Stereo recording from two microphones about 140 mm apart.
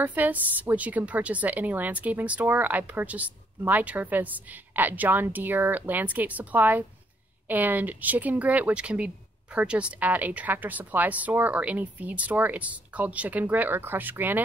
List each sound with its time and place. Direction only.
0.0 s speech: 10° right (ahead or behind)